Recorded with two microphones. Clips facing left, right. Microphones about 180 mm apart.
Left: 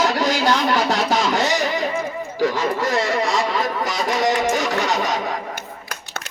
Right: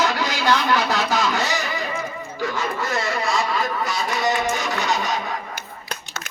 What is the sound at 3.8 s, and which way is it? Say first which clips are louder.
Speech: left 3 dB; 90° left.